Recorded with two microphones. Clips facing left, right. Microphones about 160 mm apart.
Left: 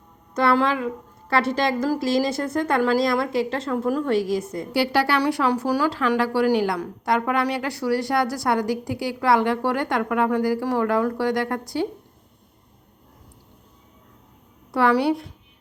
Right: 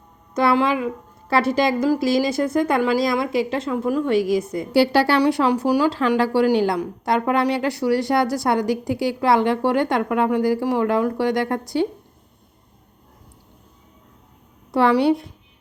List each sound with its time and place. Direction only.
0.4 s a woman's voice: 5° right (ahead or behind)
2.0 s speech: 25° left (ahead or behind)
2.5 s a woman's voice: centre (ahead or behind)
4.7 s a woman's voice: 30° right (ahead or behind)
5.9 s a woman's voice: 25° right (ahead or behind)
14.7 s a woman's voice: 25° right (ahead or behind)